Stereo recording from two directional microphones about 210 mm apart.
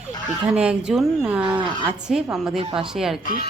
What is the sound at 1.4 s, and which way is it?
Speech, 25° right (ahead or behind).